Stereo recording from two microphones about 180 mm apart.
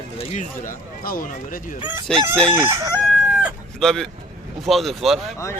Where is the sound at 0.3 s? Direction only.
50° left (ahead or behind).